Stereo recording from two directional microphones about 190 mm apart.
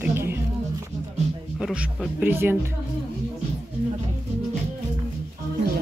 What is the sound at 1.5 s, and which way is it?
Speech, 5° right (ahead or behind).